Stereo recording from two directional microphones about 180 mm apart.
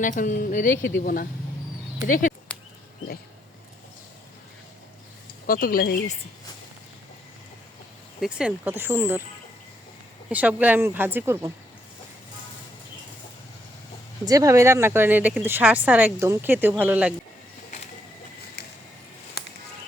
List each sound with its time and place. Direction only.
0.0 s speech: 45° left (ahead or behind)
2.5 s a sound: 5° left (ahead or behind)
5.5 s speech: 55° left (ahead or behind)
8.2 s speech: 5° right (ahead or behind)
10.2 s speech: 5° right (ahead or behind)
14.3 s speech: 20° right (ahead or behind)
19.4 s music: 65° left (ahead or behind)